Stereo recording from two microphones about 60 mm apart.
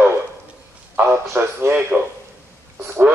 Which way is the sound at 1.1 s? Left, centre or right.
Right.